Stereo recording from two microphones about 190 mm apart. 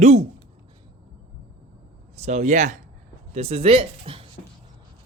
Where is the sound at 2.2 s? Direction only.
40° right (ahead or behind).